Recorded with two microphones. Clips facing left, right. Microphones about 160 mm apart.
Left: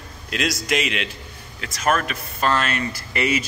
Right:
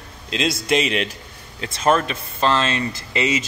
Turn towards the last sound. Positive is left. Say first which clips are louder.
# right 1 dB
turn(degrees=-20)  # may be behind; listen again after turning